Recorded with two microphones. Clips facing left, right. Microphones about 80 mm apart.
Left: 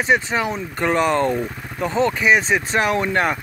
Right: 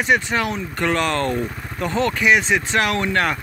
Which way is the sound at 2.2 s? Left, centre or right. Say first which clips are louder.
Right 1 dB; left.